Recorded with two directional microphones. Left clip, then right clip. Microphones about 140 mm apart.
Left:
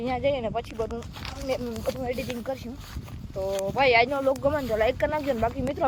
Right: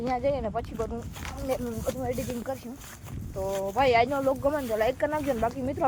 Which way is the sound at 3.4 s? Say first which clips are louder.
Left 2 dB; 30° left (ahead or behind).